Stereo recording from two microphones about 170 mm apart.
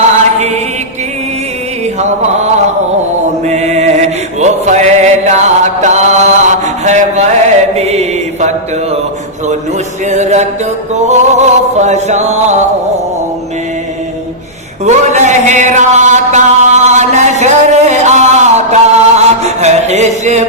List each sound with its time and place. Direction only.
0.3 s mantra: 40° right (ahead or behind)
2.0 s mantra: 40° right (ahead or behind)
3.4 s music: 40° right (ahead or behind)
7.8 s mantra: 40° right (ahead or behind)
10.1 s music: 40° right (ahead or behind)
11.0 s chant: 40° right (ahead or behind)
14.8 s mantra: 40° right (ahead or behind)